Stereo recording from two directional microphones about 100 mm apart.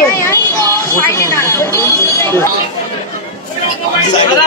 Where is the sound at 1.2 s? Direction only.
25° left (ahead or behind).